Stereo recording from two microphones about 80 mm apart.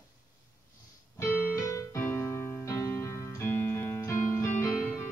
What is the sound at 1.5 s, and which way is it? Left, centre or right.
Keyboard, left.